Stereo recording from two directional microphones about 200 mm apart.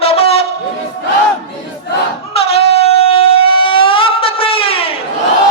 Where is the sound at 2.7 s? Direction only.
30° left (ahead or behind).